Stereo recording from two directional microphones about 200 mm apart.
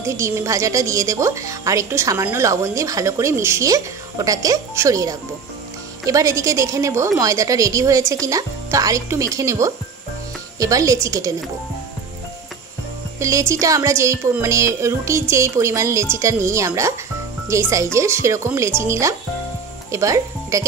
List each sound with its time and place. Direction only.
0.0 s speech: 15° right (ahead or behind)
13.2 s speech: 15° right (ahead or behind)